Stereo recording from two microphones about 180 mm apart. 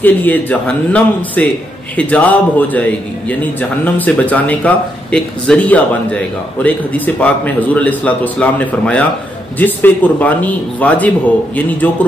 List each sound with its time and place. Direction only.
0.0 s a man's voice: 10° left (ahead or behind)